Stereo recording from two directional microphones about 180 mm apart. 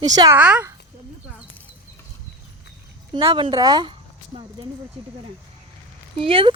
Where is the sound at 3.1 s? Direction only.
30° right (ahead or behind).